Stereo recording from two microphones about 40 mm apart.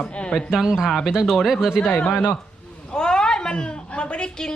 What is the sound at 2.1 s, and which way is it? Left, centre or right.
Speech, left.